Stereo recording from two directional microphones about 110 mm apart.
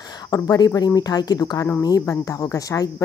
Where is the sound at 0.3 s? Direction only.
35° left (ahead or behind).